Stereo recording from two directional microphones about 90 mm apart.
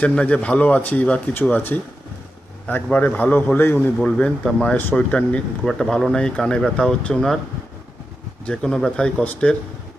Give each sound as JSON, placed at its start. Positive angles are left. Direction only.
{"t": 0.0, "sound": "a man's voice", "side_deg": 15}
{"t": 3.9, "sound": "speech", "side_deg": 10}
{"t": 8.4, "sound": "speech", "side_deg": 10}